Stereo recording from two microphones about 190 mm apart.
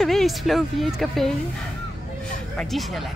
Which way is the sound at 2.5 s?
Centre (ahead or behind).